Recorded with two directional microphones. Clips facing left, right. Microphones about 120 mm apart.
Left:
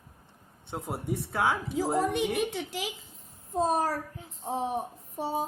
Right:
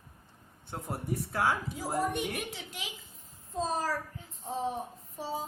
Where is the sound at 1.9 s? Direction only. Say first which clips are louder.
Left 2 dB; 90° left.